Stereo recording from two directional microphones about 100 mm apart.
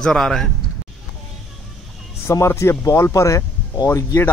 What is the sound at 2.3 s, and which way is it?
A man's voice, 30° left (ahead or behind).